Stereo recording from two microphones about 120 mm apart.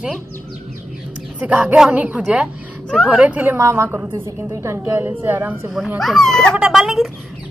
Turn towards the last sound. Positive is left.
turn(degrees=0)  # may be behind; listen again after turning